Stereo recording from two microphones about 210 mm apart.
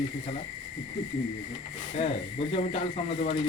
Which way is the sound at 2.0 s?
30° left (ahead or behind).